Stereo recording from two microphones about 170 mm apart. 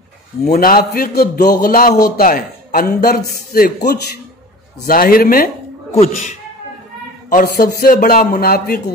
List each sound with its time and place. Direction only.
0.5 s a man's voice: 60° left (ahead or behind)
5.9 s speech: 45° left (ahead or behind)
7.2 s a man's voice: 60° left (ahead or behind)